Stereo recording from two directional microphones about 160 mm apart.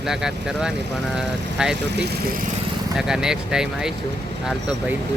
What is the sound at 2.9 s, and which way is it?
Speech, 5° right (ahead or behind).